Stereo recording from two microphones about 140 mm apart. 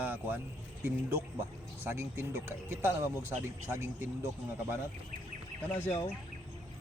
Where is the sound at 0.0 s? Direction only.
15° right (ahead or behind).